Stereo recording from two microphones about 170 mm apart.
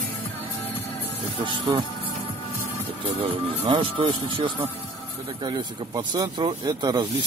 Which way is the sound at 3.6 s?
30° right (ahead or behind).